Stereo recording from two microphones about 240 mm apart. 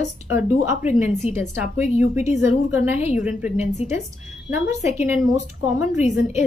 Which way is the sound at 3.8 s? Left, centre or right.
Left.